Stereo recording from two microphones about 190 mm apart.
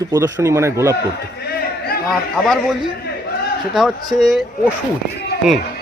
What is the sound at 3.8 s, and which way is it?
Speech, centre (ahead or behind).